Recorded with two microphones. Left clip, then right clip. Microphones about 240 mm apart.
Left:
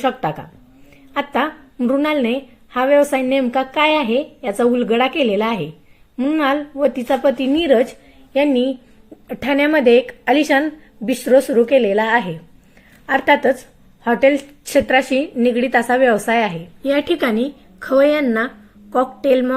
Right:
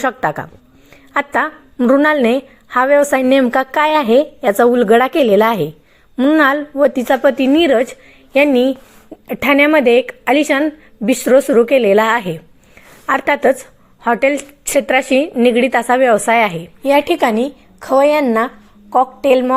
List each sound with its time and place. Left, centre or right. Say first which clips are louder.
0.0 s a woman's voice: right 3 dB; right
17.7 s a woman's voice: right 2 dB; right
18.3 s a woman's voice: right 4 dB; centre